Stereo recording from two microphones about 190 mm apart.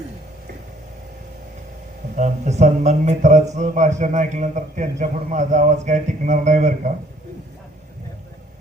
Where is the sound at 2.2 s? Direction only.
35° right (ahead or behind).